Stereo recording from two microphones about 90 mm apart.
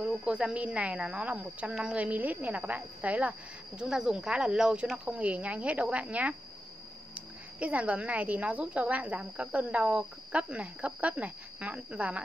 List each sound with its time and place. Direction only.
0.0 s speech: 10° right (ahead or behind)
7.5 s speech: 15° right (ahead or behind)